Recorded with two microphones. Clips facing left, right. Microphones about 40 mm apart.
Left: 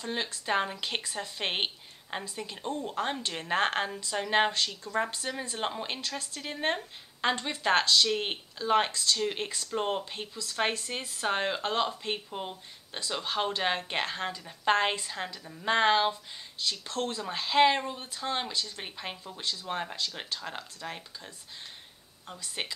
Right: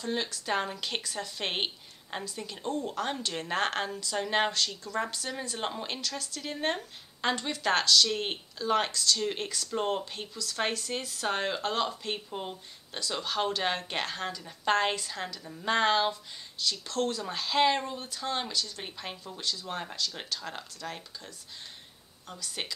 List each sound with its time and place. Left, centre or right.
0.0 s a woman's voice: centre
5.9 s a woman's voice: left
9.2 s a woman's voice: centre
13.2 s a woman's voice: centre
22.6 s a woman's voice: centre